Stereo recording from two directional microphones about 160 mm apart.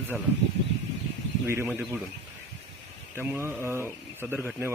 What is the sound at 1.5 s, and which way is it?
Speech, 15° right (ahead or behind).